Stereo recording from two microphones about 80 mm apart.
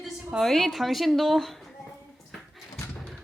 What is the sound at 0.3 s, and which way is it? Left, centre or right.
Speech, centre.